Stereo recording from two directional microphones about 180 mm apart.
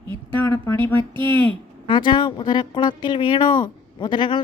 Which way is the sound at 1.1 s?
25° right (ahead or behind).